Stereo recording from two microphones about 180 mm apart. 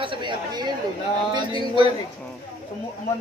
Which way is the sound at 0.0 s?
25° right (ahead or behind).